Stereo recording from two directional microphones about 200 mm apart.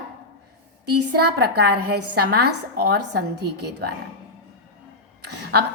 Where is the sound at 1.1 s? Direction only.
55° right (ahead or behind).